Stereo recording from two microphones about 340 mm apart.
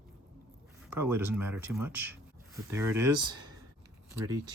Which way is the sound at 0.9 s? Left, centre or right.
Centre.